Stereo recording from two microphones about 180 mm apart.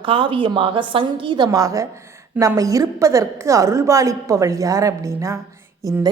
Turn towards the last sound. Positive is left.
turn(degrees=-15)  # may be behind; listen again after turning